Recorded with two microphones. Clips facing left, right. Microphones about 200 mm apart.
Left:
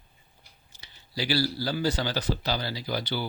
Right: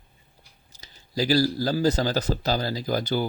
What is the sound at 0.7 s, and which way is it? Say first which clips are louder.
Speech: right 7 dB; 40° right (ahead or behind).